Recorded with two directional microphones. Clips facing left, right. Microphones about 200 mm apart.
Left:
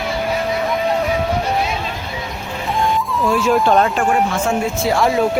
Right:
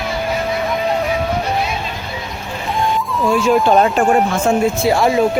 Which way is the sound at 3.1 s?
Centre (ahead or behind).